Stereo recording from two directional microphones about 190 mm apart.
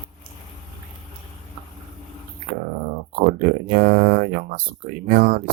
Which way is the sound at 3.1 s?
45° right (ahead or behind).